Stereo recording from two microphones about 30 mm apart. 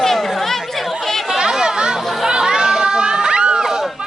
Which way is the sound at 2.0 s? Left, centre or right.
Centre.